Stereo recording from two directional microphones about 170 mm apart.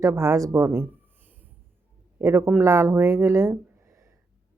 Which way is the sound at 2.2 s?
15° right (ahead or behind).